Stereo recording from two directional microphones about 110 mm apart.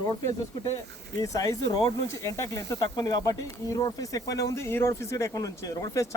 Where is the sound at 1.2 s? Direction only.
30° left (ahead or behind).